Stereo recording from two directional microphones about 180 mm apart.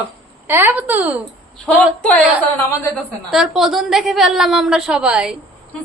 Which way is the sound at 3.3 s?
Centre (ahead or behind).